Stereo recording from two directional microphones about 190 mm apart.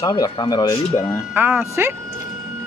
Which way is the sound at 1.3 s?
10° right (ahead or behind).